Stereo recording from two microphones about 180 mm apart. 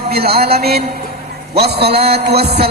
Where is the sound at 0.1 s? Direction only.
60° right (ahead or behind).